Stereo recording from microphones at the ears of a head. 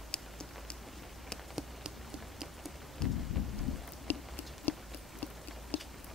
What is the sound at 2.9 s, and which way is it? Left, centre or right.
Rain, left.